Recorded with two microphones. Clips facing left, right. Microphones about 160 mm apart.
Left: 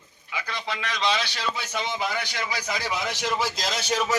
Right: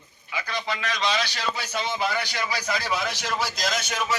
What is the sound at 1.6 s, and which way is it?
A man's voice, 20° left (ahead or behind).